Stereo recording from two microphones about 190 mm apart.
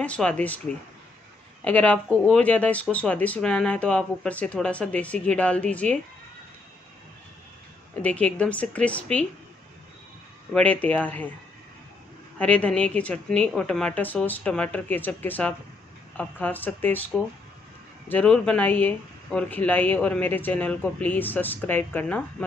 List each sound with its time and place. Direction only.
0.0 s speech: 5° left (ahead or behind)
1.6 s speech: 5° left (ahead or behind)
8.0 s speech: 5° left (ahead or behind)
10.5 s speech: 10° left (ahead or behind)
12.4 s speech: 5° left (ahead or behind)